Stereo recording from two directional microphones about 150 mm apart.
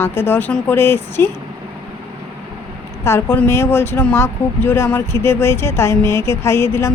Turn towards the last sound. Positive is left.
turn(degrees=15)  # may be behind; listen again after turning